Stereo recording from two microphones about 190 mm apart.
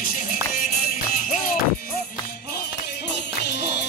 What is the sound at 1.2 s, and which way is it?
Music, 45° left (ahead or behind).